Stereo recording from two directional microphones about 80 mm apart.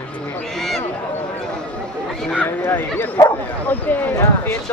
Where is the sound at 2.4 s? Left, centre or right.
Left.